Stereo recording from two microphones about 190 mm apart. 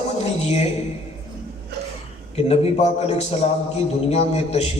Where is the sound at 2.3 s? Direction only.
35° left (ahead or behind).